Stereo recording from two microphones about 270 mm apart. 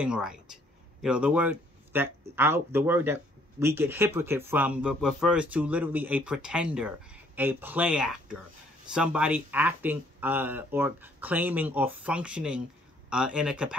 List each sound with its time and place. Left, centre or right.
0.0 s speech: centre